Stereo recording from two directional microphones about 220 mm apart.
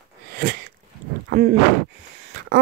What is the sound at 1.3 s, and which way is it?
Speech, 45° right (ahead or behind).